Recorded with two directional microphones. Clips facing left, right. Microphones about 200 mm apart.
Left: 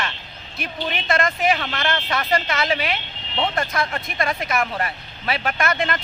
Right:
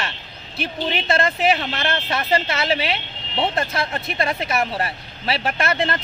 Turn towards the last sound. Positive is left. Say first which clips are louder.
# right 1 dB
turn(degrees=-30)  # may be behind; listen again after turning